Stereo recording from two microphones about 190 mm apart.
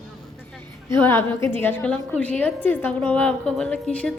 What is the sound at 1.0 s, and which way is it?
A woman's voice, 10° left (ahead or behind).